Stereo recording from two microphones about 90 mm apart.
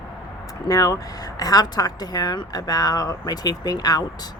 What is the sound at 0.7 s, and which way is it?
Speech, 45° left (ahead or behind).